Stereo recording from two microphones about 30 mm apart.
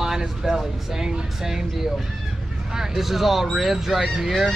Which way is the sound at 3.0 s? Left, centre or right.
Centre.